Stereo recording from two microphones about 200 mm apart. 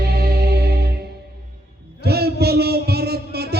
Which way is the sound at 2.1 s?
55° right (ahead or behind).